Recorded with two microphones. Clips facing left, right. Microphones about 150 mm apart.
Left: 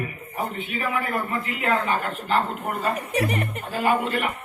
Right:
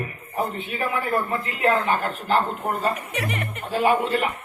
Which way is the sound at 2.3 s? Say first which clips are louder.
Right 2 dB; 35° right (ahead or behind).